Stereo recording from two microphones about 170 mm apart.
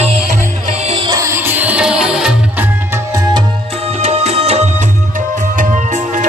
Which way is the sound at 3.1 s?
20° right (ahead or behind).